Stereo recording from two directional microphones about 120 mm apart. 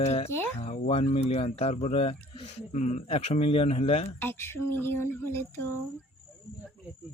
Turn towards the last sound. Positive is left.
turn(degrees=20)  # may be behind; listen again after turning